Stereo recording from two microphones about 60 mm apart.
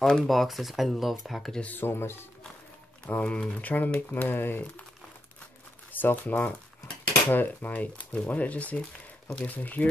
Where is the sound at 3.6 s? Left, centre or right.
Left.